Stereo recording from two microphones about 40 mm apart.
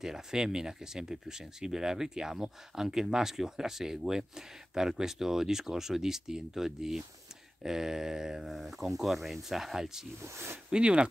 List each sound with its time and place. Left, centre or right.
0.0 s speech: centre
8.5 s speech: centre
10.7 s speech: right